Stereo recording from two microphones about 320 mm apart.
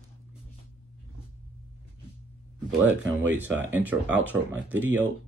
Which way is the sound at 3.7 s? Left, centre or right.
Centre.